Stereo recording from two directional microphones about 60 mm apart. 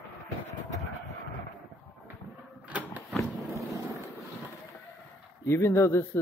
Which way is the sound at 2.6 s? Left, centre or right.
Right.